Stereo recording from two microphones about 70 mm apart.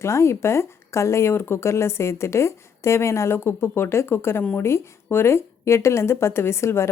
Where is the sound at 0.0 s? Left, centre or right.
Left.